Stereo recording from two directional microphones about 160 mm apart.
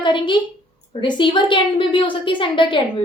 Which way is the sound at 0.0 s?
30° left (ahead or behind).